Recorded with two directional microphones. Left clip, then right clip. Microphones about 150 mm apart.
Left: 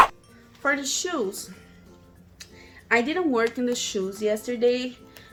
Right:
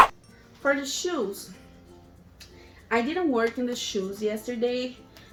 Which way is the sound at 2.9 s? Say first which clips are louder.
Left 3 dB; 45° left (ahead or behind).